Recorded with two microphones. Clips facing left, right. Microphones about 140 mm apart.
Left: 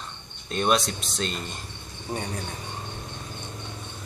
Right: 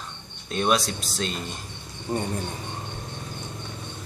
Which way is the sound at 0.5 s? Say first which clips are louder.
Even; centre (ahead or behind).